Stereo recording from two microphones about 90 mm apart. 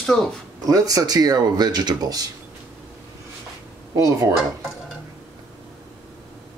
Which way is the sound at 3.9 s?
40° right (ahead or behind).